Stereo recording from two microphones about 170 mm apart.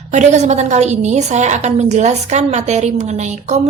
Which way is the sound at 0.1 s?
45° right (ahead or behind).